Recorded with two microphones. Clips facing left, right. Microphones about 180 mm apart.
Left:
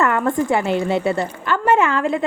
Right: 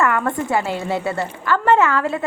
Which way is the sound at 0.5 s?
20° left (ahead or behind).